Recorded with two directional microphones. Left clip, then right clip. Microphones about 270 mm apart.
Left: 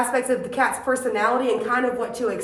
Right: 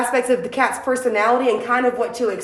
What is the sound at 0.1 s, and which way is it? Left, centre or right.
A woman's voice, right.